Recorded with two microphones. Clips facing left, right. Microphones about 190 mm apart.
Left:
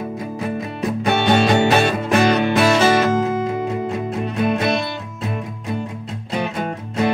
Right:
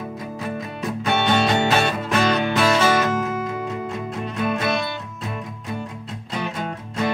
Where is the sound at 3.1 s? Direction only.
30° left (ahead or behind).